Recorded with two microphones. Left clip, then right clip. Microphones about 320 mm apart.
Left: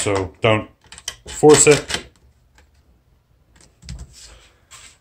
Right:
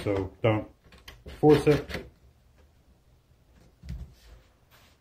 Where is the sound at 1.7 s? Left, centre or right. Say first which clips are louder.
Left 10 dB; left.